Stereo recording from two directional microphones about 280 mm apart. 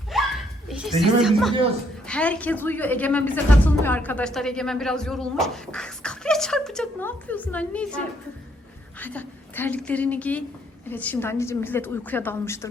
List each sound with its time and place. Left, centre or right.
0.1 s snicker: centre
2.0 s a woman's voice: centre